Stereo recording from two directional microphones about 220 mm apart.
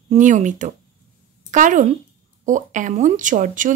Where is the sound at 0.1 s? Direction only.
35° right (ahead or behind).